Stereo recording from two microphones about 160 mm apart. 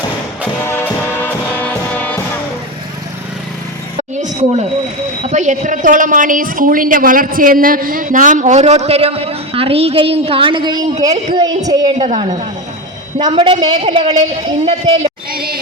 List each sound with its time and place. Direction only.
0.6 s music: 15° left (ahead or behind)
4.1 s a sound: 45° right (ahead or behind)
5.3 s a woman's voice: 50° right (ahead or behind); by 11.9 s 25° right (ahead or behind)
11.9 s a woman's voice: 40° right (ahead or behind)
13.3 s a woman's voice: 35° right (ahead or behind)
15.3 s speech: 70° right (ahead or behind)